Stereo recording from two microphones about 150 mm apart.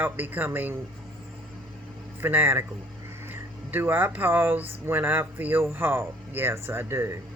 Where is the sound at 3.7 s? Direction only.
15° right (ahead or behind).